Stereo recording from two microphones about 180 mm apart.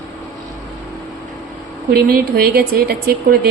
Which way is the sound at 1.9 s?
60° right (ahead or behind).